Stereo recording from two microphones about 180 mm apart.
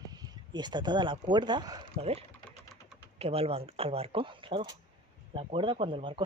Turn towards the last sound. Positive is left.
turn(degrees=-30)  # may be behind; listen again after turning